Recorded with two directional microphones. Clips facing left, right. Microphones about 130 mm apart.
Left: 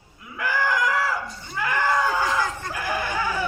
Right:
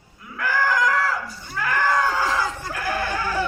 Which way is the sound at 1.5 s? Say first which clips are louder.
Right 1 dB; 20° left (ahead or behind).